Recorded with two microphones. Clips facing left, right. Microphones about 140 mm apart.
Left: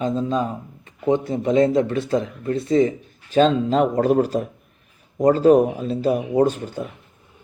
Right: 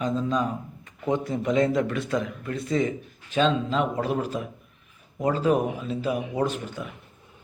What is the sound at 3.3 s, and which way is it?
Speech, 40° left (ahead or behind).